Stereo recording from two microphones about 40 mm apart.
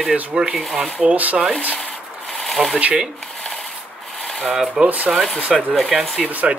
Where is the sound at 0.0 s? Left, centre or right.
Right.